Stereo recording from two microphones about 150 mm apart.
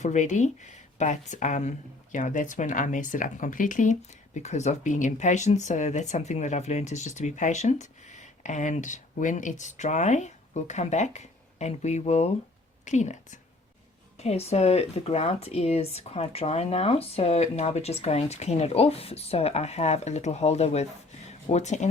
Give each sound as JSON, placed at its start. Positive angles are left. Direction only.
{"t": 0.0, "sound": "speech", "side_deg": 55}
{"t": 4.4, "sound": "a woman's voice", "side_deg": 50}
{"t": 21.2, "sound": "a sound", "side_deg": 50}